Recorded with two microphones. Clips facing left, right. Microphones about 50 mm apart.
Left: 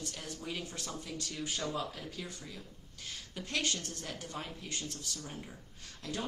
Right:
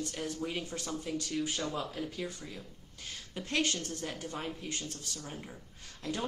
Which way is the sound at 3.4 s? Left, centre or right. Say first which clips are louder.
Right 3 dB; right.